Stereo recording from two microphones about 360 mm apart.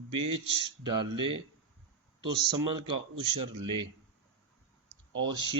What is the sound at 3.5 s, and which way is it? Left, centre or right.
Speech, centre.